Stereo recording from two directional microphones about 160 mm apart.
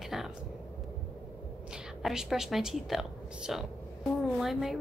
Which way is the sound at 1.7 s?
5° right (ahead or behind).